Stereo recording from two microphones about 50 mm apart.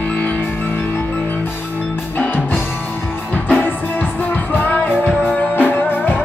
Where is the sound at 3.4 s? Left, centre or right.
Left.